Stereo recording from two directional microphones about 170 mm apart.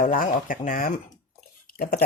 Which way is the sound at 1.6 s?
60° left (ahead or behind).